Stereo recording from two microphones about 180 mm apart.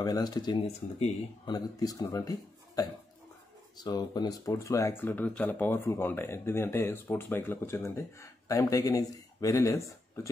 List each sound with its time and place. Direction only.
0.0 s speech: 20° left (ahead or behind)
0.7 s speech: 35° left (ahead or behind)
1.5 s speech: 20° left (ahead or behind)